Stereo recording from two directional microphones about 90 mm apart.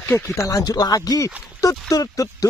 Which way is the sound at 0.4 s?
35° left (ahead or behind).